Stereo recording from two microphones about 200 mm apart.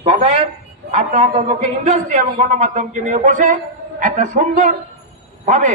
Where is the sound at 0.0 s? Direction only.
30° right (ahead or behind).